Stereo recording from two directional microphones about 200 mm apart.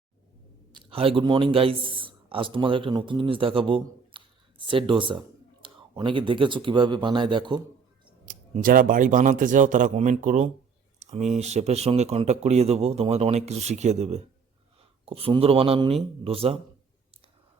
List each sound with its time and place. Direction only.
0.7 s a man's voice: 25° right (ahead or behind)
8.3 s speech: 45° right (ahead or behind)
11.0 s a sound: 35° right (ahead or behind)
11.3 s speech: 35° right (ahead or behind)